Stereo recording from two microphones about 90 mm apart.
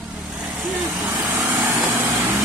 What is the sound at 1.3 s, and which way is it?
Vehicle, 30° right (ahead or behind).